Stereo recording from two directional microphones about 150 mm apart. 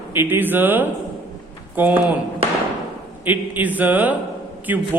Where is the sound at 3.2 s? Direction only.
10° right (ahead or behind).